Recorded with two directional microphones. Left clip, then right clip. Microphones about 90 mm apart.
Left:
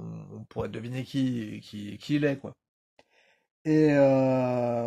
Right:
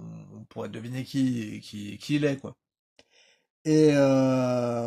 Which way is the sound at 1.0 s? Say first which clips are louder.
Right 3 dB; 10° right (ahead or behind).